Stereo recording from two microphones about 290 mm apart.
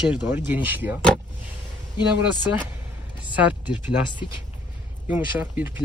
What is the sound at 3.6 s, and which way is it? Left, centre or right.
Speech, centre.